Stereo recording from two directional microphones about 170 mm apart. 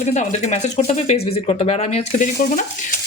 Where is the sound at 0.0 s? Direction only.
40° left (ahead or behind).